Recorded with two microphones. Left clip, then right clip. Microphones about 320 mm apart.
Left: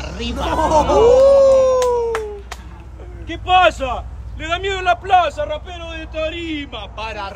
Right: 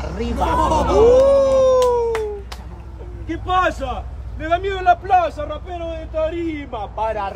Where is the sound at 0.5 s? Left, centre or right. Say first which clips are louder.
Left 3 dB; left.